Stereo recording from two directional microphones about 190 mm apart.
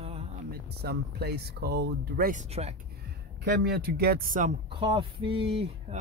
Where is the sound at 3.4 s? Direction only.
55° right (ahead or behind).